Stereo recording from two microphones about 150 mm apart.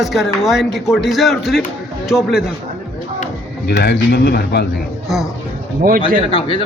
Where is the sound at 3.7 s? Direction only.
90° left.